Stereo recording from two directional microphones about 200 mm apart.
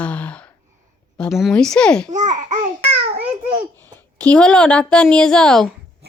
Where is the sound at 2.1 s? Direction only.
35° right (ahead or behind).